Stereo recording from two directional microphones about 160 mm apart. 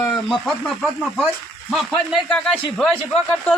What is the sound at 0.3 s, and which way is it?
Speech, centre (ahead or behind).